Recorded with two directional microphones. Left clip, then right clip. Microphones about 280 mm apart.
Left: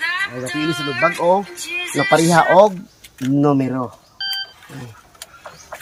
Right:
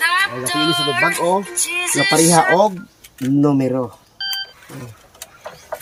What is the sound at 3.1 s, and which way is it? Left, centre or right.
Telephone dialing, centre.